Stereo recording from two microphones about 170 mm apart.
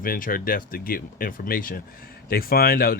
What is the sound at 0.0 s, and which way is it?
Speech, 55° left (ahead or behind).